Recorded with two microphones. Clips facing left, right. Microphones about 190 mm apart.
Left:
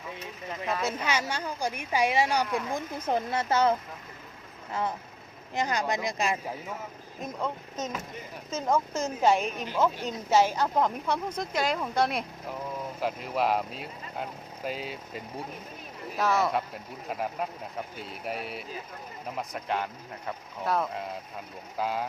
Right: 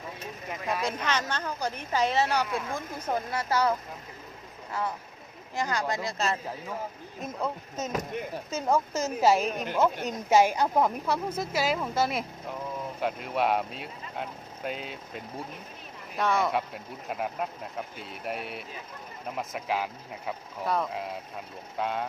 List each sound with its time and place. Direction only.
0.9 s a woman's voice: 10° left (ahead or behind)
7.2 s speech: 5° right (ahead or behind)
9.5 s speech: 45° right (ahead or behind)
10.2 s speech: 15° right (ahead or behind); by 22.0 s 5° left (ahead or behind)